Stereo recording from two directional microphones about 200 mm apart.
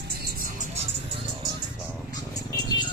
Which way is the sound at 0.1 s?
50° right (ahead or behind).